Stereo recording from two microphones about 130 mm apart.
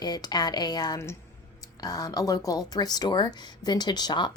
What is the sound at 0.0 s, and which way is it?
Speech, 30° left (ahead or behind).